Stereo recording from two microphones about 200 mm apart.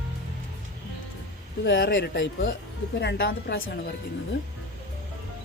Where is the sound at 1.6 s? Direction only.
55° left (ahead or behind).